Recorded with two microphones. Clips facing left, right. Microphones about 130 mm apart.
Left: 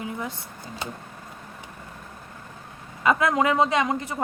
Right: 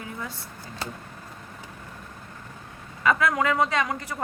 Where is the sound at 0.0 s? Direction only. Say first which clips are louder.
Left 4 dB; 20° left (ahead or behind).